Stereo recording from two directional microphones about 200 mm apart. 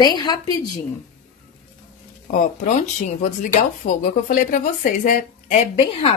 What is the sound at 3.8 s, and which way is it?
A woman's voice, 40° left (ahead or behind).